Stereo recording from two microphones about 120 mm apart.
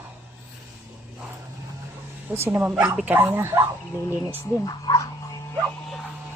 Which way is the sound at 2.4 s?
20° right (ahead or behind).